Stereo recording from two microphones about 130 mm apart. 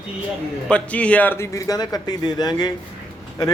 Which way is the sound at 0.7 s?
10° left (ahead or behind).